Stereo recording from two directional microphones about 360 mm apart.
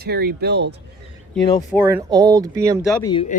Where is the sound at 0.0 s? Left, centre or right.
Right.